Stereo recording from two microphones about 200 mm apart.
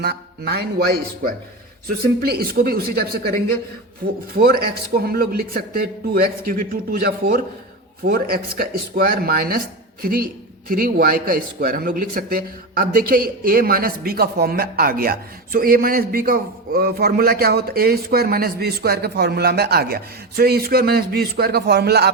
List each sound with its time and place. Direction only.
0.0 s speech: 55° right (ahead or behind)
4.4 s speech: 50° right (ahead or behind)